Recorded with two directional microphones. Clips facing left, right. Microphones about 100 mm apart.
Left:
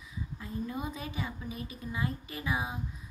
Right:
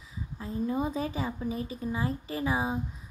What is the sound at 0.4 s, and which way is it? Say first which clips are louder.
A woman's voice: right 7 dB; 30° right (ahead or behind).